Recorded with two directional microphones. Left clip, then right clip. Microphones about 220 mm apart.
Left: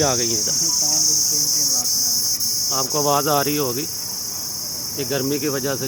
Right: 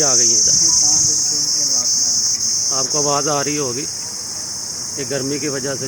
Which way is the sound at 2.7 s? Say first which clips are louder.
Even; 10° left (ahead or behind).